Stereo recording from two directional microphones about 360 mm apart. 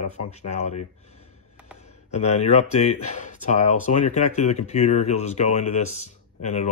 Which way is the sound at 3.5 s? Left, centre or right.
Centre.